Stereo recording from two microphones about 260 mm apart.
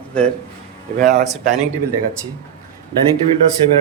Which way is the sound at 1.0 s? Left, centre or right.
Right.